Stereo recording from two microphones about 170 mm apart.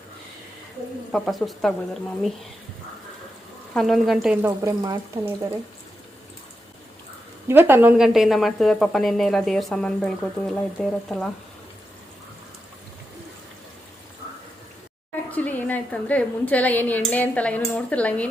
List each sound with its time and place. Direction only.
1.1 s speech: centre (ahead or behind)
3.8 s speech: centre (ahead or behind)
4.6 s speech: 20° right (ahead or behind)
7.4 s speech: 10° right (ahead or behind); by 11.3 s 5° left (ahead or behind)
15.3 s a woman's voice: 10° left (ahead or behind)